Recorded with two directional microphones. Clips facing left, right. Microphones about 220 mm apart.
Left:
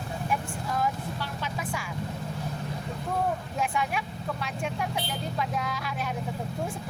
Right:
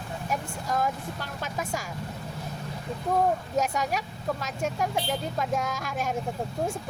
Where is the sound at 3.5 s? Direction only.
40° right (ahead or behind).